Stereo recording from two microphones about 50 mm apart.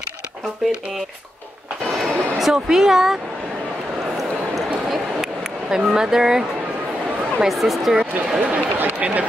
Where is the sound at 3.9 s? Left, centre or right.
Centre.